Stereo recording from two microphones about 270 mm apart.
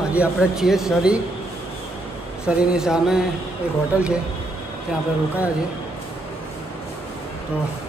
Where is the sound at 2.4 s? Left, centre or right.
Centre.